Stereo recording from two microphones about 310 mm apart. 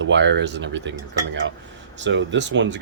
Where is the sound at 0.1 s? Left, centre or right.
Right.